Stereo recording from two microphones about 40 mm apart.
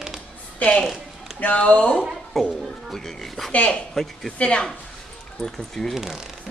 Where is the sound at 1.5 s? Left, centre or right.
Left.